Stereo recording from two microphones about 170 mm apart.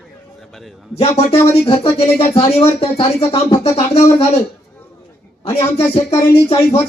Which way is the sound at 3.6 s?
40° left (ahead or behind).